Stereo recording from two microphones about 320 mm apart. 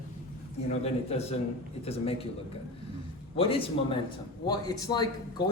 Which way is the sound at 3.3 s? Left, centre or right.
Centre.